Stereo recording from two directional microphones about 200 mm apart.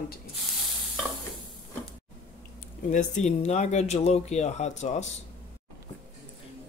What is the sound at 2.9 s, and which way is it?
Speech, 35° left (ahead or behind).